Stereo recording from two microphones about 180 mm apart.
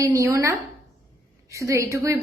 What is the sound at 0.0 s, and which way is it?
A woman's voice, 20° right (ahead or behind).